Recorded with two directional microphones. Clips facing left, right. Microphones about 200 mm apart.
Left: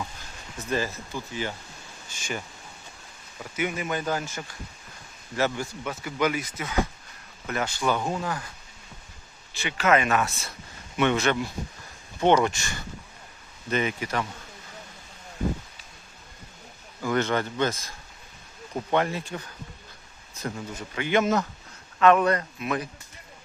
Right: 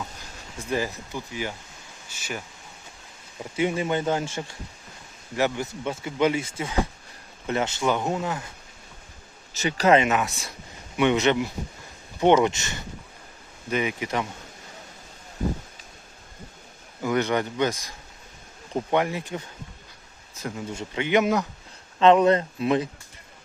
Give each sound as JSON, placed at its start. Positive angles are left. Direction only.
{"t": 0.6, "sound": "speech", "side_deg": -15}
{"t": 2.0, "sound": "insect", "side_deg": -5}
{"t": 3.3, "sound": "speech", "side_deg": -25}
{"t": 9.5, "sound": "speech", "side_deg": -40}
{"t": 10.0, "sound": "speech", "side_deg": -20}
{"t": 13.7, "sound": "speech", "side_deg": -10}
{"t": 17.0, "sound": "speech", "side_deg": -15}
{"t": 20.7, "sound": "speech", "side_deg": -20}